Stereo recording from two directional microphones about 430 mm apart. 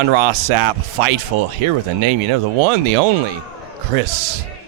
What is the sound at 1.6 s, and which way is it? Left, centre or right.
Speech, right.